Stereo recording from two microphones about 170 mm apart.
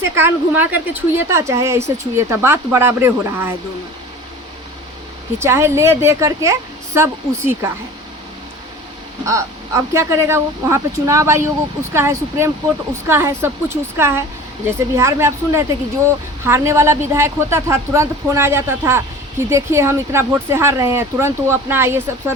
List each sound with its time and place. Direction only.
0.0 s a woman's voice: 10° right (ahead or behind)
5.4 s a woman's voice: 15° right (ahead or behind)
9.2 s a woman's voice: 15° right (ahead or behind)